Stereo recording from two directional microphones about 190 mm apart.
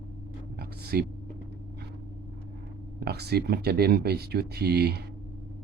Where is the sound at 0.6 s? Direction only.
55° right (ahead or behind).